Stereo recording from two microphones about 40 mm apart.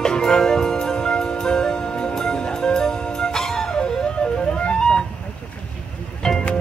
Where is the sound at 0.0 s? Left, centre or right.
Centre.